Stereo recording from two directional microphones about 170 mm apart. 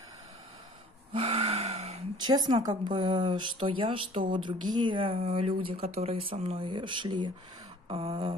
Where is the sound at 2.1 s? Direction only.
25° right (ahead or behind).